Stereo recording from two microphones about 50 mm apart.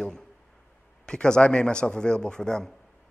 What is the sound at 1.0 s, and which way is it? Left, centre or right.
A man's voice, centre.